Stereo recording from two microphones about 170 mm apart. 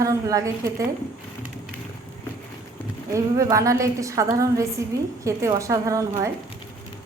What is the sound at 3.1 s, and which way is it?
A woman's voice, 20° right (ahead or behind).